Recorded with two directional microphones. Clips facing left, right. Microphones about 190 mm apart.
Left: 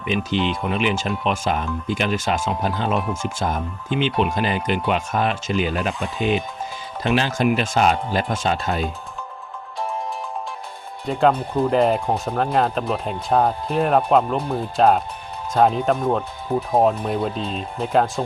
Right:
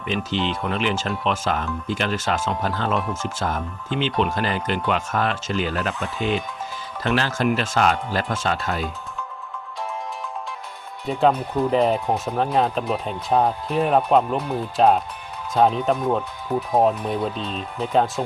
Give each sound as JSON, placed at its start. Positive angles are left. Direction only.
{"t": 0.0, "sound": "speech", "side_deg": 15}
{"t": 11.0, "sound": "speech", "side_deg": -5}
{"t": 16.5, "sound": "speech", "side_deg": 25}
{"t": 17.1, "sound": "speech", "side_deg": 0}